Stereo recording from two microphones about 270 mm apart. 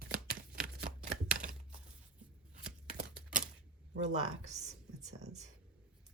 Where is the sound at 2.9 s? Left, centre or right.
Right.